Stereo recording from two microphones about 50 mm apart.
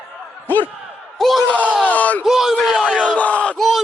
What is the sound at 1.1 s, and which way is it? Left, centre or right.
Speech, centre.